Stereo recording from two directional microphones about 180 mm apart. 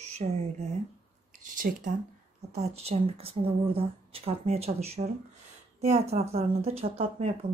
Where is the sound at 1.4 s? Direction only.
50° right (ahead or behind).